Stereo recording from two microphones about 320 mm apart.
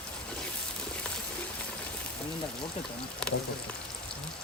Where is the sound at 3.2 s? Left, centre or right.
Centre.